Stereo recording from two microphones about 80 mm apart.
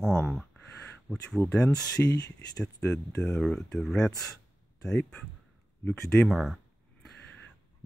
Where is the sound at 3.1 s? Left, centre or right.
Centre.